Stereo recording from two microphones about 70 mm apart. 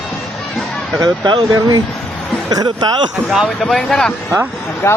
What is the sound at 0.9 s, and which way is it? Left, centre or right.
Speech, right.